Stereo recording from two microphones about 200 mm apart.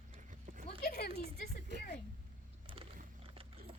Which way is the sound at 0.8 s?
50° left (ahead or behind).